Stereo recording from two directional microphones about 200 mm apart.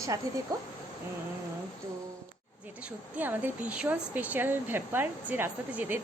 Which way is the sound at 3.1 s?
10° right (ahead or behind).